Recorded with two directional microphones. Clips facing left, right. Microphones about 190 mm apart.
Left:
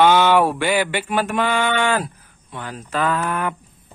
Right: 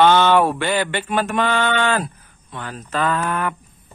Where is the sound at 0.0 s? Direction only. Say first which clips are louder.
Even; 10° left (ahead or behind).